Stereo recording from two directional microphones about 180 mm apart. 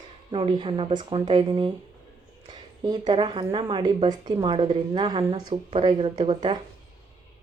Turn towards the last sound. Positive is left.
turn(degrees=-25)  # may be behind; listen again after turning